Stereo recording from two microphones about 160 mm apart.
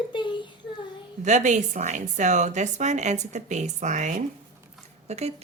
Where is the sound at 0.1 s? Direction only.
30° left (ahead or behind).